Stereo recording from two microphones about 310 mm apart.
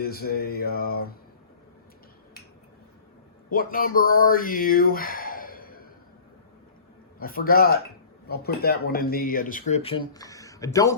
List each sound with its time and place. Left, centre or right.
0.0 s speech: left
3.5 s speech: left
7.2 s speech: left; by 10.9 s centre